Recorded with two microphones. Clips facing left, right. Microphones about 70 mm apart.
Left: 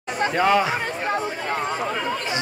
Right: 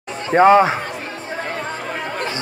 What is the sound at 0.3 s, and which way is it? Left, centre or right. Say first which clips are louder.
Speech: right 9 dB; right.